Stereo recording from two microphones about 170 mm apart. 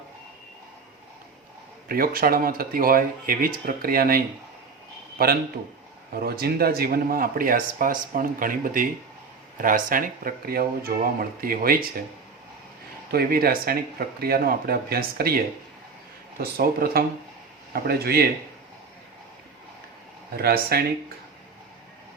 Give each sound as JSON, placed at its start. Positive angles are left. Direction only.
{"t": 1.9, "sound": "speech", "side_deg": -60}
{"t": 13.1, "sound": "speech", "side_deg": -65}
{"t": 16.4, "sound": "speech", "side_deg": -60}
{"t": 20.3, "sound": "speech", "side_deg": -65}